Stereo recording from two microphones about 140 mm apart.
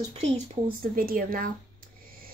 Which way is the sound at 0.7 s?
90° right.